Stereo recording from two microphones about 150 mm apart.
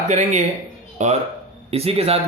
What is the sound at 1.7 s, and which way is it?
Speech, 40° right (ahead or behind).